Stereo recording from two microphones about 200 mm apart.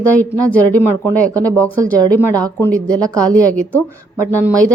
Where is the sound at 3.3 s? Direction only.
5° left (ahead or behind).